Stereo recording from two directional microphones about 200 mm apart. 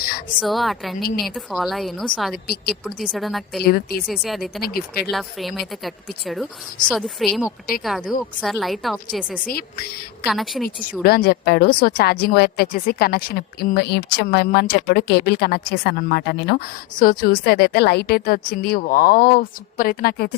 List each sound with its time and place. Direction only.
0.3 s speech: centre (ahead or behind)
2.3 s speech: 50° left (ahead or behind)
2.8 s speech: centre (ahead or behind)
3.6 s speech: 50° left (ahead or behind)
4.1 s speech: centre (ahead or behind)
4.6 s speech: 50° left (ahead or behind)
5.1 s speech: centre (ahead or behind)
9.5 s speech: 50° left (ahead or behind)
10.2 s speech: centre (ahead or behind)
11.0 s speech: 50° left (ahead or behind)